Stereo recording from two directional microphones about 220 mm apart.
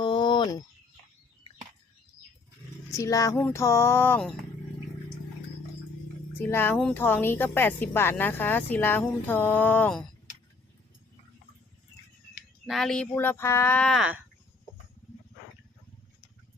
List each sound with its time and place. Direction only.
0.0 s a sound: 20° left (ahead or behind)
2.9 s speech: 15° left (ahead or behind)
6.4 s speech: 10° left (ahead or behind)
12.6 s speech: centre (ahead or behind)